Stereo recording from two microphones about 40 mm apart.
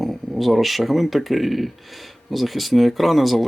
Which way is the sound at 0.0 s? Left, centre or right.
Centre.